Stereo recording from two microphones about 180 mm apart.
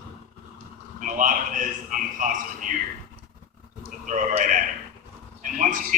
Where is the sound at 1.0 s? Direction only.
45° right (ahead or behind).